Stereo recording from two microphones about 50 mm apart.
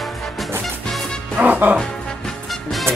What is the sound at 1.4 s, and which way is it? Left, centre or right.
Music, right.